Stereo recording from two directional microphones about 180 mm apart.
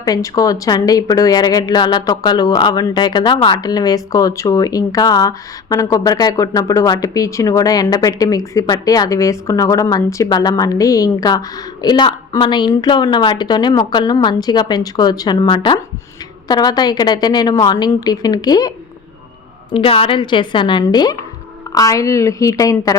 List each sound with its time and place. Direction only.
0.0 s speech: 20° left (ahead or behind)
19.7 s a woman's voice: 30° left (ahead or behind)